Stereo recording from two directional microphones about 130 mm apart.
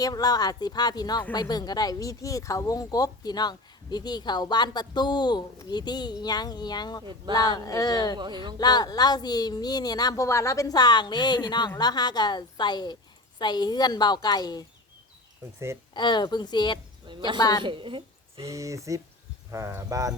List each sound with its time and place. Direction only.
0.0 s speech: 30° left (ahead or behind)
7.0 s speech: 35° right (ahead or behind)
7.3 s speech: 30° left (ahead or behind)
8.2 s speech: 35° right (ahead or behind)
8.5 s speech: 30° left (ahead or behind)
15.5 s speech: 20° right (ahead or behind)
16.0 s speech: 35° left (ahead or behind)
17.1 s a woman's voice: 35° right (ahead or behind)
18.4 s speech: 25° right (ahead or behind)